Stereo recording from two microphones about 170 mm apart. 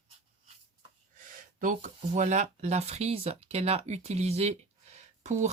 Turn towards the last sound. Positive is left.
turn(degrees=-40)  # may be behind; listen again after turning